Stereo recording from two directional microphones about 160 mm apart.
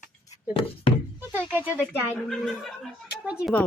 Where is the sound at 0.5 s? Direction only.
35° left (ahead or behind).